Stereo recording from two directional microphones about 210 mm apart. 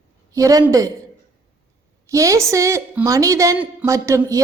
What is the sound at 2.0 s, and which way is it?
A woman's voice, 15° right (ahead or behind).